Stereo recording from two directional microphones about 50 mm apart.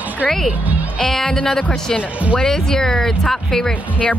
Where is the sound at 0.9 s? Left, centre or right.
Centre.